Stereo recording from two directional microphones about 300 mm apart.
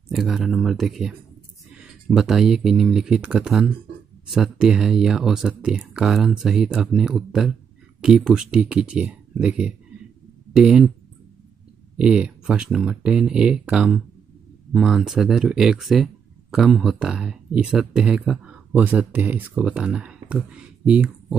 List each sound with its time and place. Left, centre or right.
0.1 s speech: centre
12.0 s speech: centre